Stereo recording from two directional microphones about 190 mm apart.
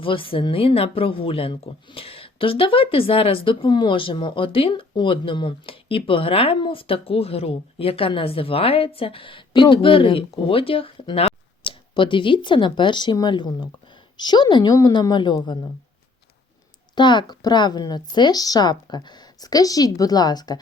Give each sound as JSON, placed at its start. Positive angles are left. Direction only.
{"t": 0.0, "sound": "speech", "side_deg": 25}
{"t": 16.9, "sound": "speech", "side_deg": 25}